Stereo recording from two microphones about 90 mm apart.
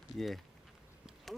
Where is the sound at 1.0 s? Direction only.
Centre (ahead or behind).